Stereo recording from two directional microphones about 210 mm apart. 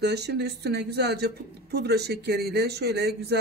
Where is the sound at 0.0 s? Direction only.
50° right (ahead or behind).